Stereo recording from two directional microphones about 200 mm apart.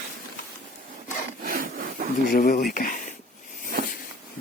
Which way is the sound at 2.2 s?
45° left (ahead or behind).